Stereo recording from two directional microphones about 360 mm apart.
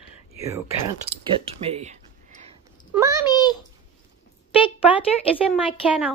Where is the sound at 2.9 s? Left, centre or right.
Centre.